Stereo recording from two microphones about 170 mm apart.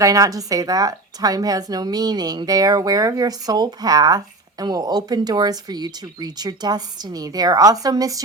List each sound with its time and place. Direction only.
0.0 s a woman's voice: 20° right (ahead or behind)